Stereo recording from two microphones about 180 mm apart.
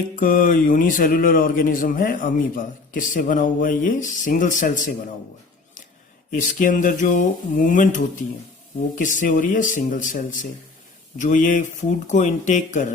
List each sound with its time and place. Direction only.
0.2 s speech: 50° left (ahead or behind)
6.3 s speech: 45° left (ahead or behind)